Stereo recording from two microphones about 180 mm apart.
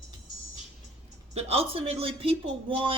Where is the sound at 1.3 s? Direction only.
35° right (ahead or behind).